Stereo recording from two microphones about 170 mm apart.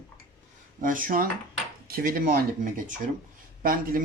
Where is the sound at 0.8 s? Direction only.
55° right (ahead or behind).